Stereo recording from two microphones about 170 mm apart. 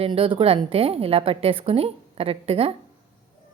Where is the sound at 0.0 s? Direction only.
30° right (ahead or behind).